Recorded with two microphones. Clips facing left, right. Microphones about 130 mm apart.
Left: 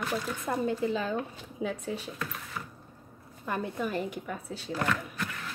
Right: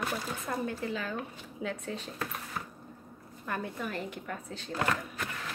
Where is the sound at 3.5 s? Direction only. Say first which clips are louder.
Left 4 dB; 15° left (ahead or behind).